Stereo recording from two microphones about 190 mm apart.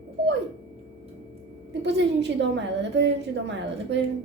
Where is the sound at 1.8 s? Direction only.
65° right (ahead or behind).